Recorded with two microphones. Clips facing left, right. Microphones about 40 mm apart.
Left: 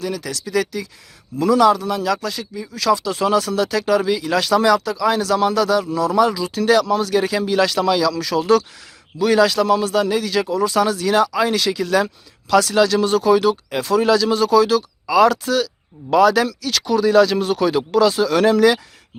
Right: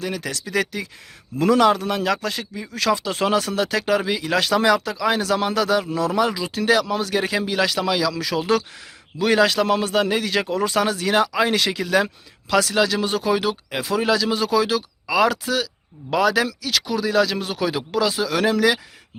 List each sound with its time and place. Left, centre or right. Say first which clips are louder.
0.0 s a man's voice: left 2 dB; right
12.7 s speech: left 5 dB; centre